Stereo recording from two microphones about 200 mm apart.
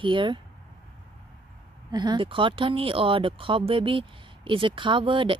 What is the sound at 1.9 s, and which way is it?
Speech, 20° right (ahead or behind).